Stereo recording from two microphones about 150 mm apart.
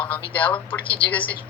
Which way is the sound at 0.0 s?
10° left (ahead or behind).